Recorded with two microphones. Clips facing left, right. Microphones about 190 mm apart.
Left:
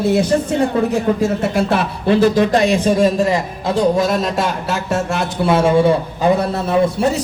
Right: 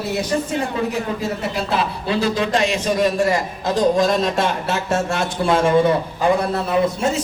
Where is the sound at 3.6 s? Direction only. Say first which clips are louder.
Left 1 dB; 5° left (ahead or behind).